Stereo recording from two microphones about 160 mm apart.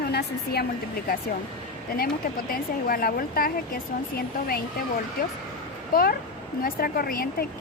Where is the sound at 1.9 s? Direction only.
65° left (ahead or behind).